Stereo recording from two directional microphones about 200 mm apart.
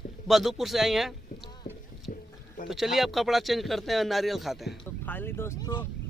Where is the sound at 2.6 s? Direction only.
Centre (ahead or behind).